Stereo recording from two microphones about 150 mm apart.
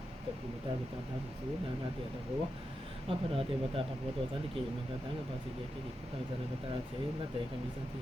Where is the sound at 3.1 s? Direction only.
40° right (ahead or behind).